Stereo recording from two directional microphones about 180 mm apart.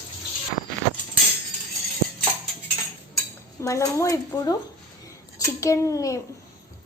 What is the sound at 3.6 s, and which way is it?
A woman's voice, 15° left (ahead or behind).